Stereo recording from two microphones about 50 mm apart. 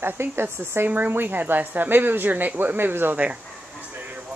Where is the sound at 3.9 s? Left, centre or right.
Right.